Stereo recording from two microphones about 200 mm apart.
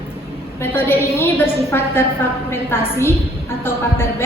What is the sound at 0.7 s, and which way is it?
A woman's voice, 10° left (ahead or behind).